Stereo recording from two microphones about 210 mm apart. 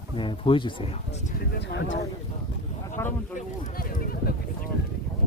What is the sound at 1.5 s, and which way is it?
Speech, 60° left (ahead or behind).